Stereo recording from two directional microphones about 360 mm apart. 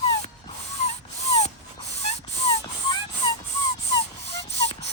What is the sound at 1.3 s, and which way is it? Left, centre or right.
Dog, centre.